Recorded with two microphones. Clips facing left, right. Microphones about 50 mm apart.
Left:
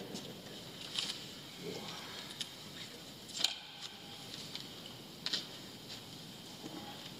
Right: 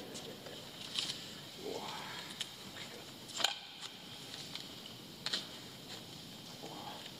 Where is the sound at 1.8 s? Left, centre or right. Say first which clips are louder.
Right 2 dB; centre.